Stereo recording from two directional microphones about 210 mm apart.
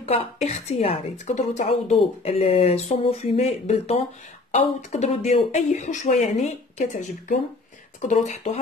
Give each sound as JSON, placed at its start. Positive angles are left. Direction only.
{"t": 0.0, "sound": "a woman's voice", "side_deg": 25}